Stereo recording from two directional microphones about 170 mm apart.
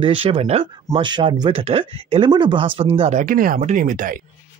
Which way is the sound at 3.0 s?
45° right (ahead or behind).